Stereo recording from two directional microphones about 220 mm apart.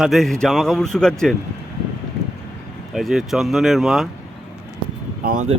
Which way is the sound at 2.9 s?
Centre (ahead or behind).